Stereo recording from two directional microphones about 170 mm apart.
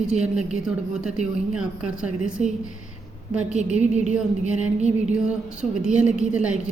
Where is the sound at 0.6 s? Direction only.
5° right (ahead or behind).